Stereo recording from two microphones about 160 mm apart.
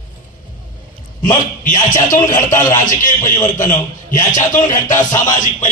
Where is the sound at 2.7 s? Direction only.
55° left (ahead or behind).